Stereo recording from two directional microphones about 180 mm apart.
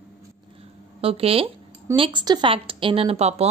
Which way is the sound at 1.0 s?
30° right (ahead or behind).